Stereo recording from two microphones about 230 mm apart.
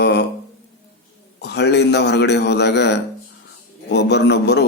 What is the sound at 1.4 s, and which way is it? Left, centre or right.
A man's voice, left.